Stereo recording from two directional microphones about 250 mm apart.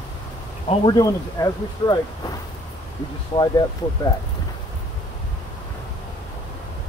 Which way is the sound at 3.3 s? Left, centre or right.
Centre.